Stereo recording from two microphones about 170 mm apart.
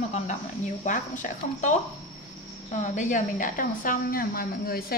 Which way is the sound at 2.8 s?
45° left (ahead or behind).